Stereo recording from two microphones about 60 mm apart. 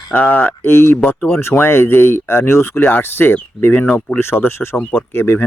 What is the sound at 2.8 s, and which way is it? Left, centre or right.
Speech, left.